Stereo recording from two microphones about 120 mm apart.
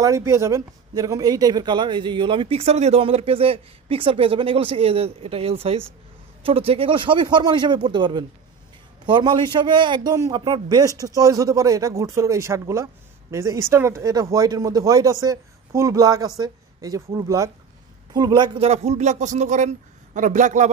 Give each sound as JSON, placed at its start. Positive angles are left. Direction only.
{"t": 0.0, "sound": "a man's voice", "side_deg": -25}
{"t": 18.6, "sound": "a man's voice", "side_deg": -60}